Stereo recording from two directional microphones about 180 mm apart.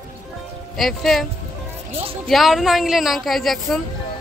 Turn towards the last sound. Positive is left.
turn(degrees=0)  # may be behind; listen again after turning